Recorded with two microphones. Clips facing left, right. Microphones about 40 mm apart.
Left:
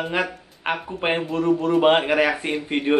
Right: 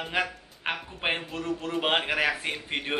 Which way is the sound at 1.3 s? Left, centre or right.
Centre.